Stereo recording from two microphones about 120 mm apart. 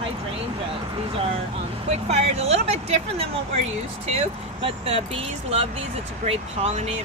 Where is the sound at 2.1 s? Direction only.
60° right (ahead or behind).